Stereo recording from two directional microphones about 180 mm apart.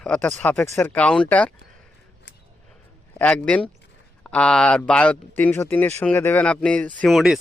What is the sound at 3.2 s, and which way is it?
A man's voice, 5° left (ahead or behind).